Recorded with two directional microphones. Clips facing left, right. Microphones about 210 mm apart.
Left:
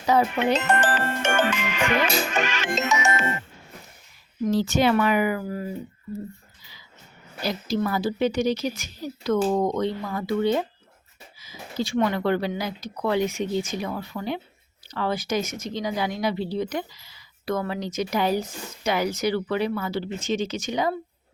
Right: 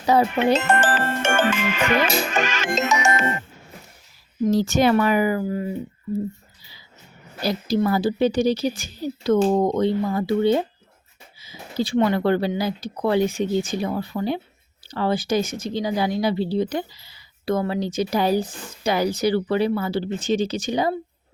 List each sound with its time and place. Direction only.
0.0 s speech: 30° right (ahead or behind)
0.8 s music: 90° right
1.2 s music: 50° right (ahead or behind)
4.5 s speech: 45° right (ahead or behind); by 5.7 s 25° right (ahead or behind)
7.4 s speech: 35° right (ahead or behind)